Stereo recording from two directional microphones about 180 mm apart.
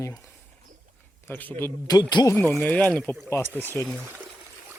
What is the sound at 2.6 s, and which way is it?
Speech, 10° left (ahead or behind).